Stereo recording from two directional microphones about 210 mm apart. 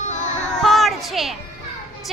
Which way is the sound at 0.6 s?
Centre (ahead or behind).